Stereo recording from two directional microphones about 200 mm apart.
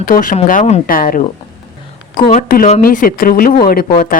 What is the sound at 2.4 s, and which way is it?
Speech, 45° left (ahead or behind).